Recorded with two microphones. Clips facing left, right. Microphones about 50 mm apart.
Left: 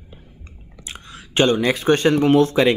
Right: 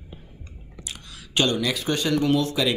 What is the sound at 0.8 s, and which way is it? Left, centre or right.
Speech, left.